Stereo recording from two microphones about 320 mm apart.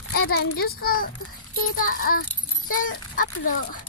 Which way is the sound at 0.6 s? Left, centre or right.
Left.